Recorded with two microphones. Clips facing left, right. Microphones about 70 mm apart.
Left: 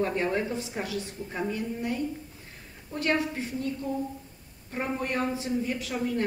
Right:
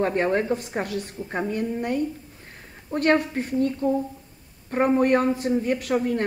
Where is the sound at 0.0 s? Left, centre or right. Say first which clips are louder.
Right 5 dB; right.